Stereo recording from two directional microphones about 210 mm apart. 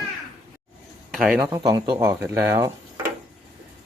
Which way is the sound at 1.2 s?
5° right (ahead or behind).